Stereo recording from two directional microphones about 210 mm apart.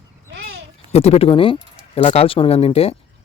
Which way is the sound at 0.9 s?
30° left (ahead or behind).